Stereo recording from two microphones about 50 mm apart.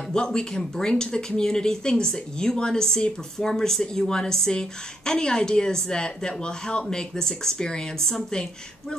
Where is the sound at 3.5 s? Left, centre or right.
Centre.